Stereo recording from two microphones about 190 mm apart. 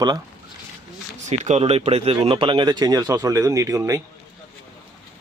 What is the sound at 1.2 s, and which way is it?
Speech, 40° right (ahead or behind).